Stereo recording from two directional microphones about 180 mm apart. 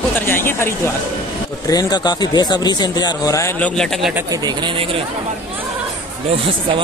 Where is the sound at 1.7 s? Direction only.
20° left (ahead or behind).